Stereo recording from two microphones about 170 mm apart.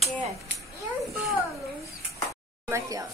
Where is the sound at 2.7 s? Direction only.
20° right (ahead or behind).